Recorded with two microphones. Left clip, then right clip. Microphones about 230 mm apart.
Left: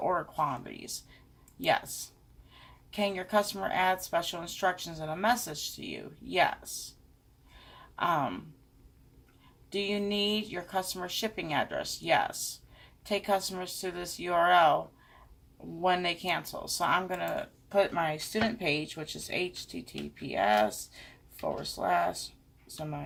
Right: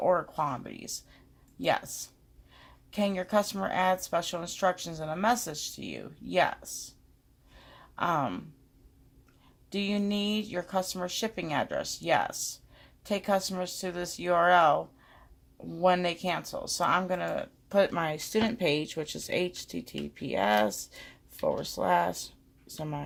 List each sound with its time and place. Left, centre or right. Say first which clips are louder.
0.0 s speech: right 3 dB; right
7.9 s speech: even; right
9.6 s speech: left 1 dB; right
15.8 s speech: right 3 dB; right